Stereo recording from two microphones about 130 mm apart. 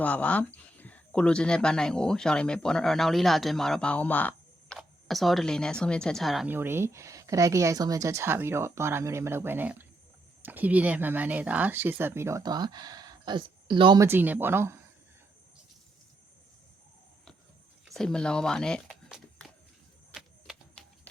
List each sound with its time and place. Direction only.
0.0 s speech: 10° left (ahead or behind)
4.8 s speech: centre (ahead or behind)
6.5 s speech: 15° right (ahead or behind)
12.4 s speech: 30° right (ahead or behind)
14.0 s speech: 15° right (ahead or behind)
17.8 s speech: 5° left (ahead or behind)
20.8 s a sound: 5° left (ahead or behind)